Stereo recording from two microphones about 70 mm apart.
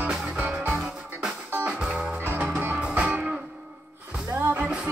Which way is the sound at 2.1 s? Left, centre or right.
Right.